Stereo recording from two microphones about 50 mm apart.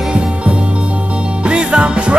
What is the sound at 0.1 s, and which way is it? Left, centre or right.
Music, right.